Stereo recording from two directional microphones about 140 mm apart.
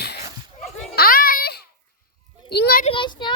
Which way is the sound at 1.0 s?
90° left.